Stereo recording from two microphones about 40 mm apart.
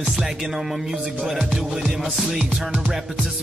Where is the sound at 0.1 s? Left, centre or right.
Centre.